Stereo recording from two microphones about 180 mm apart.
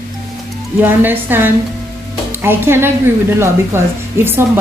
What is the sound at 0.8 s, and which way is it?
A woman's voice, 10° right (ahead or behind).